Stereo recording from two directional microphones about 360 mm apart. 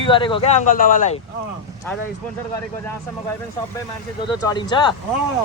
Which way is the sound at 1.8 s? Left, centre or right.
Centre.